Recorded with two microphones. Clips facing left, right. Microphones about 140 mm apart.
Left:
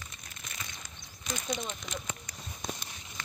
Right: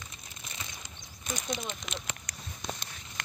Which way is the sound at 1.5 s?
Centre (ahead or behind).